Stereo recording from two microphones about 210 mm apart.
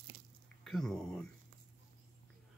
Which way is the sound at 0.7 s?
Centre (ahead or behind).